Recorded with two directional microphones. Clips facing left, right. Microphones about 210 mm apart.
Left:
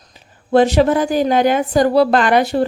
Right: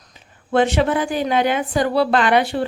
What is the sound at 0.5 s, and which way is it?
A woman's voice, 40° left (ahead or behind).